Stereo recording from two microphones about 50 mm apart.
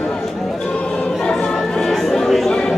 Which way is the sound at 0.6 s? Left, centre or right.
Left.